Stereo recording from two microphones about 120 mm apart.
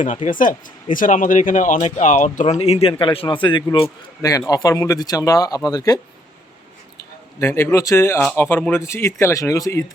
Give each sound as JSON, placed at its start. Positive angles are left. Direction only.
{"t": 0.3, "sound": "speech", "side_deg": 90}
{"t": 4.2, "sound": "speech", "side_deg": 30}
{"t": 7.3, "sound": "speech", "side_deg": 20}